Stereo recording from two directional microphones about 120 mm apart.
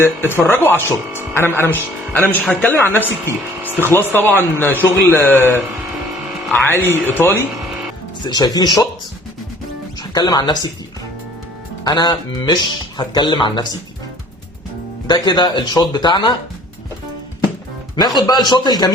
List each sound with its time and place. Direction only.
0.3 s speech: 20° left (ahead or behind)
8.3 s speech: 35° left (ahead or behind)
10.0 s speech: 35° left (ahead or behind)
11.9 s speech: 35° left (ahead or behind)
15.0 s speech: 35° left (ahead or behind)
17.9 s speech: 35° left (ahead or behind)